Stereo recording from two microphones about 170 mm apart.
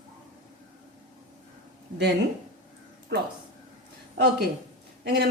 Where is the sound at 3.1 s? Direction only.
75° right (ahead or behind).